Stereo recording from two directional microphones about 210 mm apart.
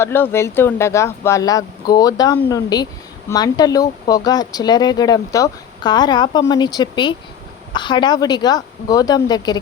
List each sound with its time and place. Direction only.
0.0 s a woman's voice: 10° left (ahead or behind)